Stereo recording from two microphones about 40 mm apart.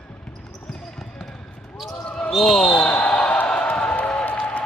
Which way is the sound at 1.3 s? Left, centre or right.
Centre.